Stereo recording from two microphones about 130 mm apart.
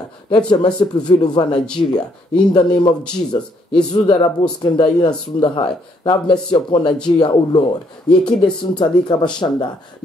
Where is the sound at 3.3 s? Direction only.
50° left (ahead or behind).